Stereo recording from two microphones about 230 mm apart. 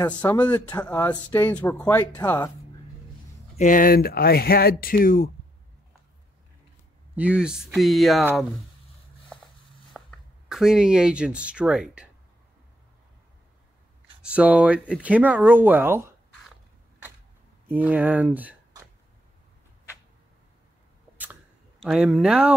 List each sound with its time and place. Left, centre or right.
0.0 s speech: centre
3.5 s speech: left
7.2 s speech: centre
9.9 s speech: centre
14.2 s speech: centre
17.6 s speech: centre
21.8 s speech: centre